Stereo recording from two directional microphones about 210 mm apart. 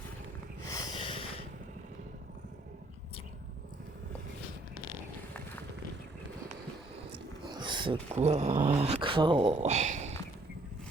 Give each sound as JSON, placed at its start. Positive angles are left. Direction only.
{"t": 0.7, "sound": "snort", "side_deg": 20}
{"t": 7.1, "sound": "speech", "side_deg": -20}